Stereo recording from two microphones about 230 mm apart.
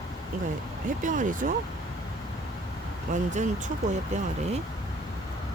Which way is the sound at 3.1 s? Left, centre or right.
Right.